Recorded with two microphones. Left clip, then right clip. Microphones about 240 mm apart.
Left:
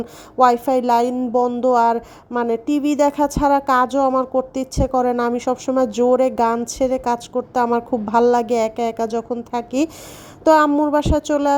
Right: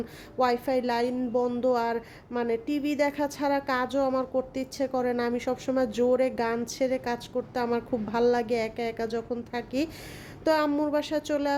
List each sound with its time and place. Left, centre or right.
0.0 s speech: left